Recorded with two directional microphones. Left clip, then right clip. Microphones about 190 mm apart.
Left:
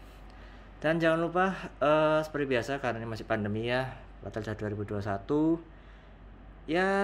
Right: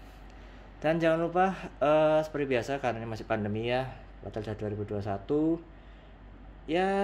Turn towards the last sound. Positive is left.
turn(degrees=10)  # may be behind; listen again after turning